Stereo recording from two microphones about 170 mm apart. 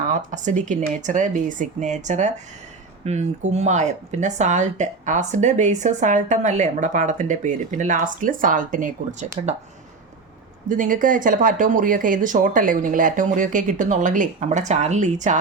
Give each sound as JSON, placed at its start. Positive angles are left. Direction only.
{"t": 0.1, "sound": "speech", "side_deg": -45}
{"t": 10.7, "sound": "speech", "side_deg": -50}